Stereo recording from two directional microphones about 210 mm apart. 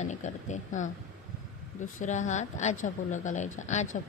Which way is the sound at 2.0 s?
35° left (ahead or behind).